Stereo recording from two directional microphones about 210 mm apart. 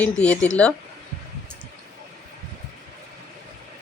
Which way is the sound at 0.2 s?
5° left (ahead or behind).